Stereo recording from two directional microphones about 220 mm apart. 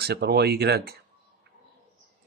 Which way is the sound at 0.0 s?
45° right (ahead or behind).